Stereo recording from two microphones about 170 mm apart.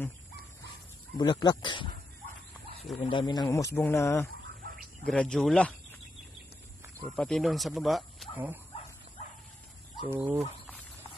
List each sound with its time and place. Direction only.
1.1 s speech: 30° left (ahead or behind)
3.0 s speech: 30° left (ahead or behind)
5.0 s speech: 5° left (ahead or behind)
7.2 s speech: centre (ahead or behind)
10.0 s speech: 10° right (ahead or behind)